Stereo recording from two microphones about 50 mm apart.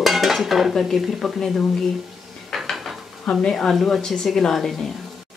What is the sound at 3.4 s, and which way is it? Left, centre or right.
Speech, centre.